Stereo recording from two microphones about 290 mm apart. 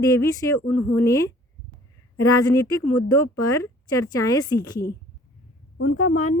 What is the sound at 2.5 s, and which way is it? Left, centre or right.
Speech, centre.